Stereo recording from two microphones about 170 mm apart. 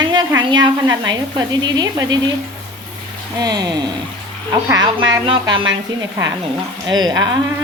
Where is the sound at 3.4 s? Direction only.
25° right (ahead or behind).